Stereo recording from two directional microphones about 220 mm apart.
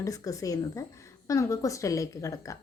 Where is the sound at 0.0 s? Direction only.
15° left (ahead or behind).